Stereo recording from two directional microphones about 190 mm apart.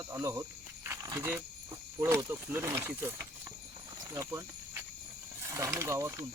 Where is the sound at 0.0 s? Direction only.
15° right (ahead or behind).